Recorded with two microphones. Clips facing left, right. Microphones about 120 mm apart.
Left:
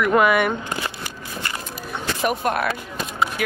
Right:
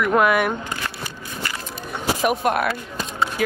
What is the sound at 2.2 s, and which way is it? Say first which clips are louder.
Speech: right 1 dB; 5° right (ahead or behind).